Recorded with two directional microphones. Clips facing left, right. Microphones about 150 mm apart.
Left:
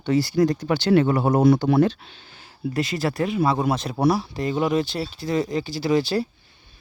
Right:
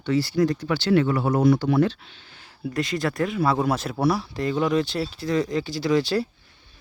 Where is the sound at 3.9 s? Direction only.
20° left (ahead or behind).